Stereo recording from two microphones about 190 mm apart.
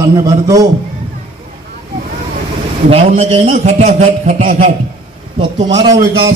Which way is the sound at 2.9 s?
30° right (ahead or behind).